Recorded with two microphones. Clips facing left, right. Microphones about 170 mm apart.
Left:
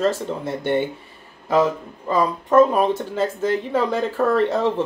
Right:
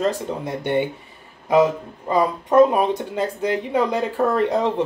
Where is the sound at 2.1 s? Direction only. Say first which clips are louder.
Even; 20° right (ahead or behind).